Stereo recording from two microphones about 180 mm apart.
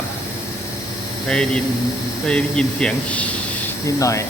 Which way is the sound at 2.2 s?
5° left (ahead or behind).